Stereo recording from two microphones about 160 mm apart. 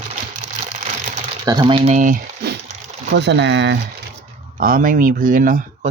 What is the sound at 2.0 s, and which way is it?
Speech, 55° right (ahead or behind).